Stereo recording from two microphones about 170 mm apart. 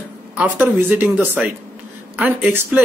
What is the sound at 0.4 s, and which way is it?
Speech, 10° right (ahead or behind).